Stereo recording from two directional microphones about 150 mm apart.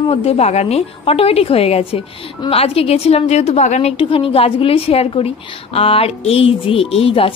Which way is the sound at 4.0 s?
35° left (ahead or behind).